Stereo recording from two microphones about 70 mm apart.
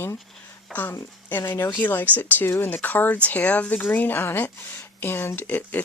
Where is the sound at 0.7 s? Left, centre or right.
Left.